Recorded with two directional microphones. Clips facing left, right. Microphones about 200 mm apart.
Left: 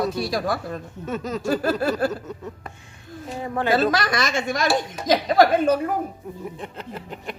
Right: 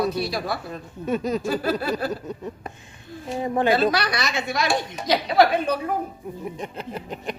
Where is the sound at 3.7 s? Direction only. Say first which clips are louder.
Left 5 dB; 45° left (ahead or behind).